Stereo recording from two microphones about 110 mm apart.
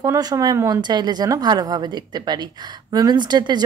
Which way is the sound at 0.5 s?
25° right (ahead or behind).